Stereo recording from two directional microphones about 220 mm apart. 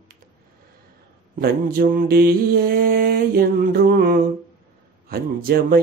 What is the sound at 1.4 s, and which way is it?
Speech, 45° right (ahead or behind).